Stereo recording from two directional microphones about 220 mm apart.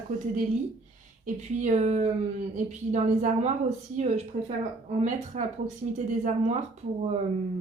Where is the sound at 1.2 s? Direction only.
35° right (ahead or behind).